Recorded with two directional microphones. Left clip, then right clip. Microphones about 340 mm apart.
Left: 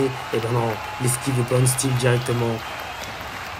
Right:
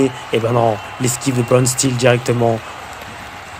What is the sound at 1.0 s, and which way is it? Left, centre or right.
Speech, right.